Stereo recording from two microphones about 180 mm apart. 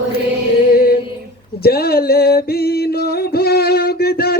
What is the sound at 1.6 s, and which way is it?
Music, 60° left (ahead or behind).